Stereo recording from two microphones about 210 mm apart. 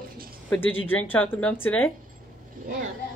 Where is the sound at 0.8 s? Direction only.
10° left (ahead or behind).